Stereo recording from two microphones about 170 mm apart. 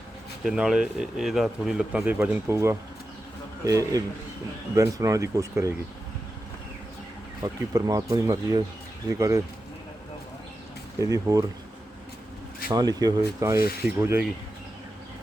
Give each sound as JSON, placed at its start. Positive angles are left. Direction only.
{"t": 0.4, "sound": "speech", "side_deg": -5}
{"t": 7.7, "sound": "speech", "side_deg": -20}
{"t": 11.1, "sound": "speech", "side_deg": -20}
{"t": 12.7, "sound": "speech", "side_deg": -25}